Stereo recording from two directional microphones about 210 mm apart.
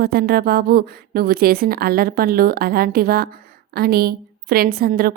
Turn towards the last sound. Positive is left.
turn(degrees=-45)  # may be behind; listen again after turning